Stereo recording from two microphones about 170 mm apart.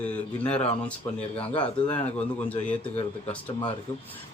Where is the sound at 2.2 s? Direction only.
10° left (ahead or behind).